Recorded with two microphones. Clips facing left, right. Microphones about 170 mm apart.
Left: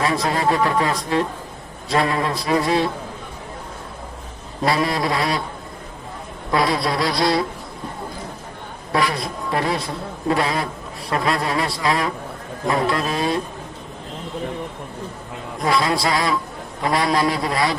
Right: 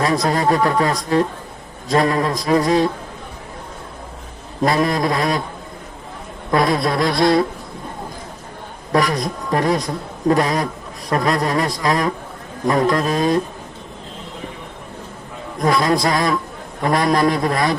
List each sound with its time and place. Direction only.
0.0 s speech: 40° right (ahead or behind)
4.6 s a man's voice: 45° right (ahead or behind)
6.5 s a man's voice: 45° right (ahead or behind)
8.9 s a man's voice: 45° right (ahead or behind)
15.6 s a man's voice: 45° right (ahead or behind)